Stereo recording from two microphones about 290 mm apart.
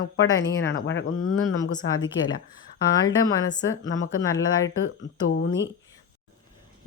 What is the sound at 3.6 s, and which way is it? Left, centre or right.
Speech, left.